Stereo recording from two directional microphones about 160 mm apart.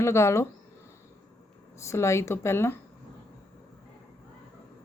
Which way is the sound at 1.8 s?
20° left (ahead or behind).